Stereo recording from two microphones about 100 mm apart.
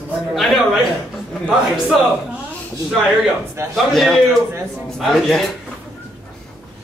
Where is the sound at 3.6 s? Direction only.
25° right (ahead or behind).